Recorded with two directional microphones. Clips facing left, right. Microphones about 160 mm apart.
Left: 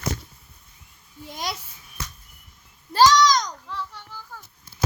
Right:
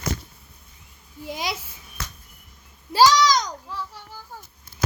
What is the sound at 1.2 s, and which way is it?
Speech, 5° right (ahead or behind).